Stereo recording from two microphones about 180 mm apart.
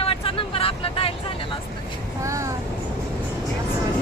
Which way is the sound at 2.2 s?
15° right (ahead or behind).